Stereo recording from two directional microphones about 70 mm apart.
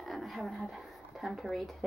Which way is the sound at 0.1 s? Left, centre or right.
Centre.